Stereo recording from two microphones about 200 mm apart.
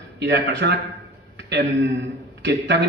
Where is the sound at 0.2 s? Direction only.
60° right (ahead or behind).